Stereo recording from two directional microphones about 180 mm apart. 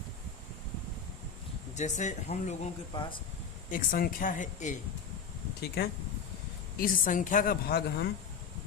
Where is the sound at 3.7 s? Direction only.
50° left (ahead or behind).